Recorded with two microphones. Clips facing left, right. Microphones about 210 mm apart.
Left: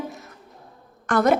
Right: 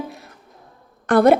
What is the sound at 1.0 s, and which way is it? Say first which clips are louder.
Speech: right 6 dB; 30° right (ahead or behind).